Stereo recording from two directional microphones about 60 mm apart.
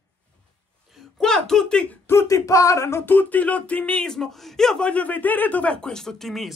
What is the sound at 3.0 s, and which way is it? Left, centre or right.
Speech, left.